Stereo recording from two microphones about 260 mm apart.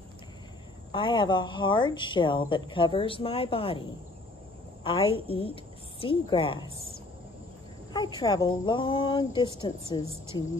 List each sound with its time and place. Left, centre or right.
0.9 s speech: centre
4.8 s a woman's voice: left
7.9 s speech: centre